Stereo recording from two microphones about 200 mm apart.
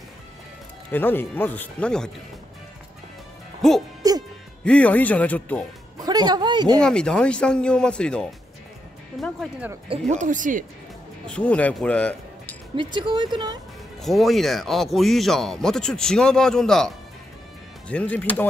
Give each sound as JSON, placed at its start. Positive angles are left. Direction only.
{"t": 0.9, "sound": "speech", "side_deg": 10}
{"t": 4.0, "sound": "hoot", "side_deg": -15}
{"t": 4.6, "sound": "speech", "side_deg": 5}
{"t": 5.9, "sound": "speech", "side_deg": -20}
{"t": 6.8, "sound": "speech", "side_deg": 5}
{"t": 9.8, "sound": "speech", "side_deg": -35}
{"t": 11.2, "sound": "speech", "side_deg": 5}
{"t": 12.7, "sound": "speech", "side_deg": -20}
{"t": 14.0, "sound": "speech", "side_deg": 0}